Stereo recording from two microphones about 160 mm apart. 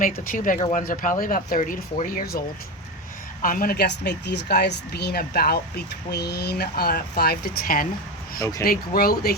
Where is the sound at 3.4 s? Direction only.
65° left (ahead or behind).